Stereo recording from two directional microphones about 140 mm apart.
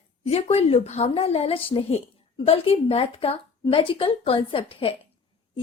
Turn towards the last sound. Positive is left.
turn(degrees=40)  # may be behind; listen again after turning